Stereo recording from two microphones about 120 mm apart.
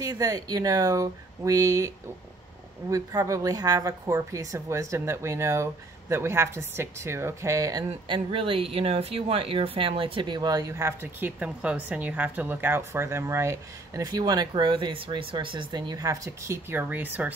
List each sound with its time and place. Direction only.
0.0 s a woman's voice: 30° right (ahead or behind)
2.9 s a woman's voice: 30° right (ahead or behind)
8.1 s speech: 45° right (ahead or behind); by 16.5 s 30° right (ahead or behind)
16.7 s speech: 15° right (ahead or behind)